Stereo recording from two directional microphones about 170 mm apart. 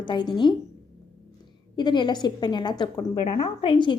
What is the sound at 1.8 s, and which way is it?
A woman's voice, 25° left (ahead or behind).